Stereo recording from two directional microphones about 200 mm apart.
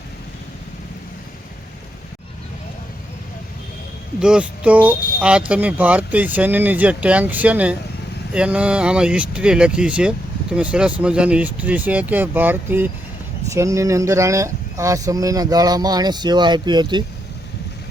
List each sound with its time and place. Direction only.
4.2 s speech: 5° right (ahead or behind); by 17.0 s 20° right (ahead or behind)